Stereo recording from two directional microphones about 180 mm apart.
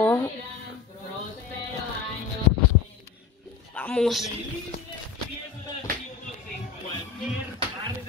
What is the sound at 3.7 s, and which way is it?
Speech, 5° left (ahead or behind).